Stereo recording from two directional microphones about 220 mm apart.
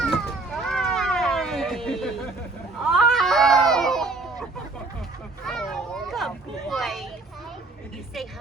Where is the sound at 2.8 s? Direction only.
Centre (ahead or behind).